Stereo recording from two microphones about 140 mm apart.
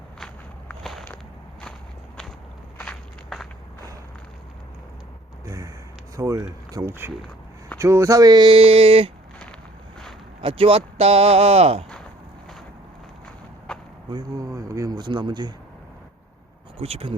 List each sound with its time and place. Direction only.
0.7 s walk: centre (ahead or behind)
2.7 s walk: 5° left (ahead or behind)
5.5 s a sound: 25° right (ahead or behind)
6.1 s speech: 20° right (ahead or behind); by 9.1 s 40° right (ahead or behind)
10.4 s speech: 40° right (ahead or behind)
13.7 s a sound: 5° left (ahead or behind)
14.1 s speech: 25° right (ahead or behind)
16.7 s speech: 45° right (ahead or behind)